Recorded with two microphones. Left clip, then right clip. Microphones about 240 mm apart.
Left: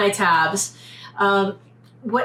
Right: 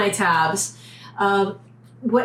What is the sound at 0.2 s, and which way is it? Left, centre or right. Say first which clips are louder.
A woman's voice: left 1 dB; centre.